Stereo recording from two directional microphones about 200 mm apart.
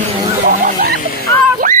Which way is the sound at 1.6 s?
40° right (ahead or behind).